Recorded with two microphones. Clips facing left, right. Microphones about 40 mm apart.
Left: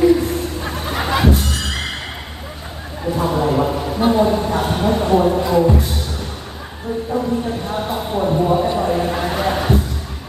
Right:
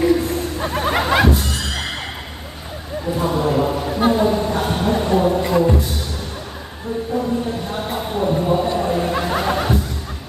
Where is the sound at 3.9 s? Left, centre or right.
Centre.